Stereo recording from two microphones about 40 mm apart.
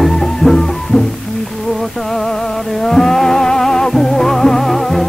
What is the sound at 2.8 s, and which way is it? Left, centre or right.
Music, centre.